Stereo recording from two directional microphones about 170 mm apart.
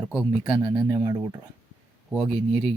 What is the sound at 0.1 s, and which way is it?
Speech, 5° right (ahead or behind).